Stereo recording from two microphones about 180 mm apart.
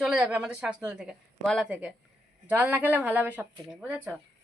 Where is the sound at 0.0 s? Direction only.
5° right (ahead or behind).